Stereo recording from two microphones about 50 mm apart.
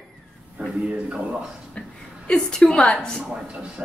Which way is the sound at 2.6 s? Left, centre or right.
Centre.